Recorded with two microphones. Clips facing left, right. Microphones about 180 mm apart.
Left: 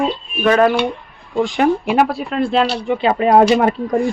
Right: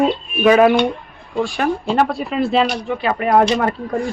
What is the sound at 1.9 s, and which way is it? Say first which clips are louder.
Speech: left 1 dB; centre (ahead or behind).